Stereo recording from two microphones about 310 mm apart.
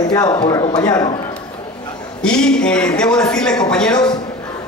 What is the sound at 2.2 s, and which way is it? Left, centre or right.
A man's voice, centre.